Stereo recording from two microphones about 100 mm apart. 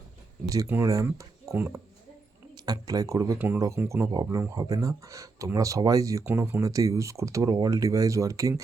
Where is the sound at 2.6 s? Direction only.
35° right (ahead or behind).